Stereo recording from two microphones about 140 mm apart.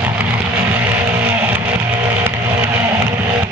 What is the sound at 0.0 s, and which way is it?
Music, 15° right (ahead or behind).